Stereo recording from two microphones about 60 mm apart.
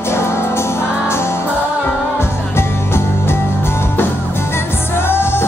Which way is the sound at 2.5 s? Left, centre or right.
Left.